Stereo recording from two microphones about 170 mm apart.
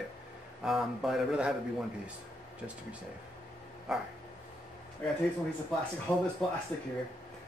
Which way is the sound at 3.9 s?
Centre (ahead or behind).